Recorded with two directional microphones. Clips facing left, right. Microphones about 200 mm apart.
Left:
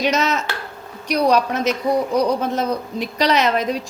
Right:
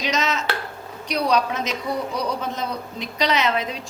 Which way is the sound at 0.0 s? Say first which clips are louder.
Left 4 dB; 55° left (ahead or behind).